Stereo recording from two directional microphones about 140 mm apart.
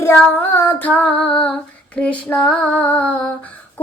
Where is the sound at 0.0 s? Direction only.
15° left (ahead or behind).